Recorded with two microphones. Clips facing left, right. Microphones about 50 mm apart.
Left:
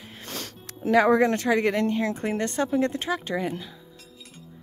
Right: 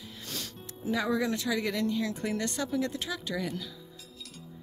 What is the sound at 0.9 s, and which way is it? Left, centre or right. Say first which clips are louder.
A woman's voice: left 10 dB; left.